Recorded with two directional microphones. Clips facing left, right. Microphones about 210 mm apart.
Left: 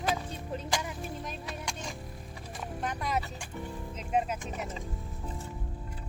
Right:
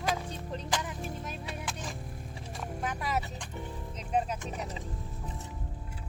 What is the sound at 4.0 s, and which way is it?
Music, 5° left (ahead or behind).